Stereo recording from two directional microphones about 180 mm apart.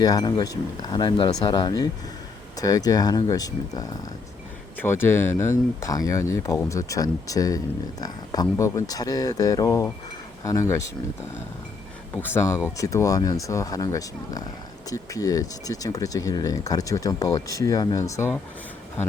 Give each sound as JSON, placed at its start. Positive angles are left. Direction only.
{"t": 0.0, "sound": "speech", "side_deg": 20}
{"t": 12.1, "sound": "speech", "side_deg": 10}